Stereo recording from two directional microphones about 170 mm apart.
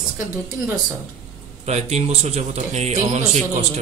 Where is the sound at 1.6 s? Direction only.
40° right (ahead or behind).